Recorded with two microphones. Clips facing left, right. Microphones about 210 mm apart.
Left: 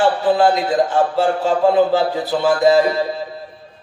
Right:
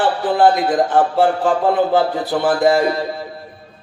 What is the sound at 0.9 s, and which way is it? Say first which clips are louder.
Speech: right 2 dB; 55° right (ahead or behind).